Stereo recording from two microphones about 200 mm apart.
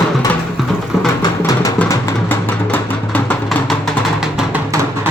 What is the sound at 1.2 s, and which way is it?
Music, 15° left (ahead or behind).